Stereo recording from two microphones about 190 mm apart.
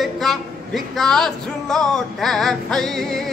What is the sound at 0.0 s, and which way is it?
Music, centre (ahead or behind).